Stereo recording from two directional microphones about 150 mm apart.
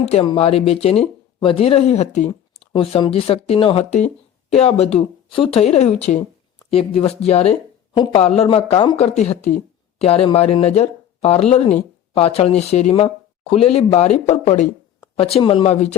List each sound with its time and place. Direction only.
0.0 s speech: 45° left (ahead or behind)
9.1 s speech: 50° left (ahead or behind)
15.2 s speech: 40° left (ahead or behind)